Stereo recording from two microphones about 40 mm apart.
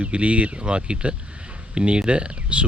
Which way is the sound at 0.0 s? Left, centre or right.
Right.